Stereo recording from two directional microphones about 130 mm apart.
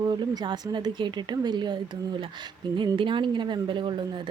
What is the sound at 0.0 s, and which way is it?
Speech, 30° right (ahead or behind).